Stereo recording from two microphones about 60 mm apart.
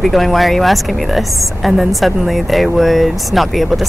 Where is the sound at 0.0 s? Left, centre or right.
Centre.